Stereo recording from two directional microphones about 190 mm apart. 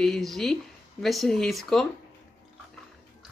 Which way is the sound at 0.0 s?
Centre (ahead or behind).